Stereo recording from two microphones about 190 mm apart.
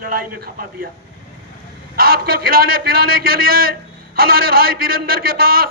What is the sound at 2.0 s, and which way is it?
A man's voice, 50° right (ahead or behind).